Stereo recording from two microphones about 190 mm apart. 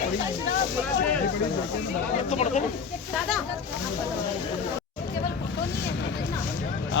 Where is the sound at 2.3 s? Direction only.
35° left (ahead or behind).